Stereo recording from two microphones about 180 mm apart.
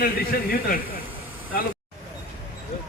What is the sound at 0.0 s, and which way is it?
A man's voice, 55° left (ahead or behind).